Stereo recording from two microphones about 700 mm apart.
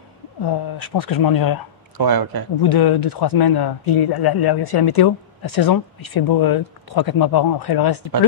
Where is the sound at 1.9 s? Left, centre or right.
Right.